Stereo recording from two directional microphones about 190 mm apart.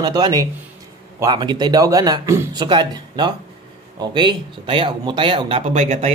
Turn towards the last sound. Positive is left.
turn(degrees=-35)  # may be behind; listen again after turning